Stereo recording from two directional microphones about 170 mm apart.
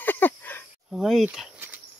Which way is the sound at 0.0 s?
10° left (ahead or behind).